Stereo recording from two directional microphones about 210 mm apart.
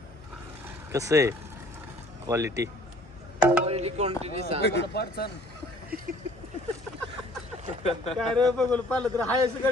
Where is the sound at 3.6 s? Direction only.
30° right (ahead or behind).